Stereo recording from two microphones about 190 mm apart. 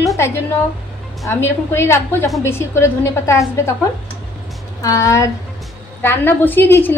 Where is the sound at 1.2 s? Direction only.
15° left (ahead or behind).